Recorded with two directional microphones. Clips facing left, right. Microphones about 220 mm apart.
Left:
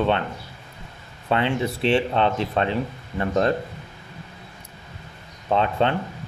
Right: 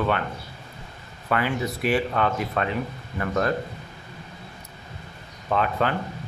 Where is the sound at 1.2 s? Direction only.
25° left (ahead or behind).